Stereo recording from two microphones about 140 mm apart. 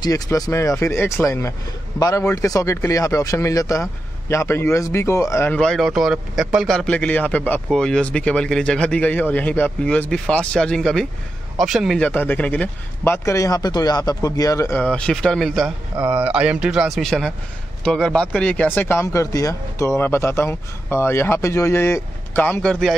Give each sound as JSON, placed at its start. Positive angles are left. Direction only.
{"t": 0.0, "sound": "speech", "side_deg": 25}
{"t": 5.6, "sound": "a man's voice", "side_deg": 0}
{"t": 12.0, "sound": "a man's voice", "side_deg": 10}
{"t": 16.0, "sound": "a man's voice", "side_deg": -10}